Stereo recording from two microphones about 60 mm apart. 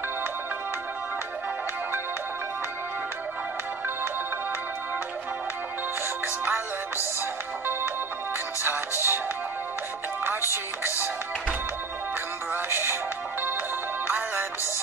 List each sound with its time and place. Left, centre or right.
6.2 s music: right
8.6 s music: right
10.2 s music: right
12.6 s music: right
14.0 s music: right